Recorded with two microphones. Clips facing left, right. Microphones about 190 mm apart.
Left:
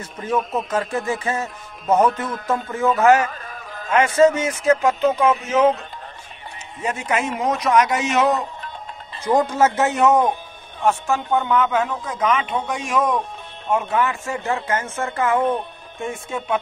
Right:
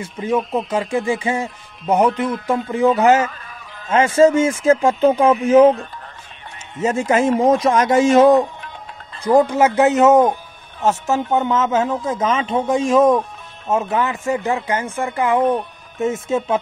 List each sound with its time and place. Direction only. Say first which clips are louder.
0.3 s speech: right 3 dB; 30° right (ahead or behind)
0.7 s speech: right 3 dB; 15° right (ahead or behind)
3.3 s a sound: left 2 dB; 40° left (ahead or behind)
3.9 s speech: right 2 dB; 25° right (ahead or behind)
6.8 s speech: right 7 dB; 25° right (ahead or behind)
9.2 s speech: right 4 dB; 15° right (ahead or behind)